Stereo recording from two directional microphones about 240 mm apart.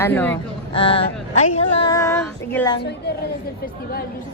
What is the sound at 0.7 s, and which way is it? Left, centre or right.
Speech, left.